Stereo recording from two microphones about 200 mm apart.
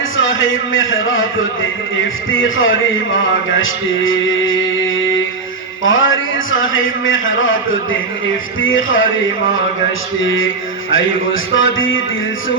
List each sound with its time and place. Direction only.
0.2 s speech: 75° left (ahead or behind)
5.8 s speech: 75° left (ahead or behind)